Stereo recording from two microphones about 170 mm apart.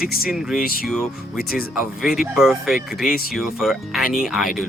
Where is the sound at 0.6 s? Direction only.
60° left (ahead or behind).